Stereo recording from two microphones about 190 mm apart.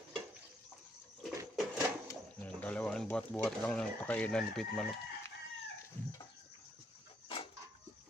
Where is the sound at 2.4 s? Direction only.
5° left (ahead or behind).